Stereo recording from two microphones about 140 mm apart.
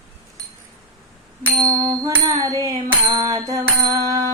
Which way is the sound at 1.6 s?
25° right (ahead or behind).